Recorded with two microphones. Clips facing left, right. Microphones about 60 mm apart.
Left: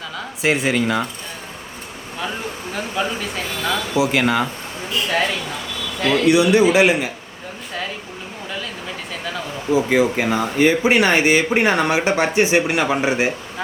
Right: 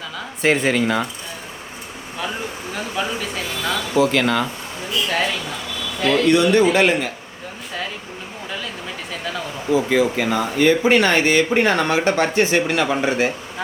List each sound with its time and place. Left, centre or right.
0.4 s speech: centre
2.7 s speech: centre
6.1 s speech: centre
9.7 s speech: centre